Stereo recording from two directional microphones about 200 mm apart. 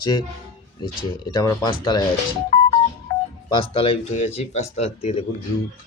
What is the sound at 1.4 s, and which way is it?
Speech, 20° left (ahead or behind).